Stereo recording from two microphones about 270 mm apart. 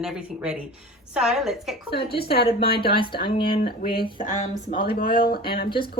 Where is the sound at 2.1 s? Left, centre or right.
Left.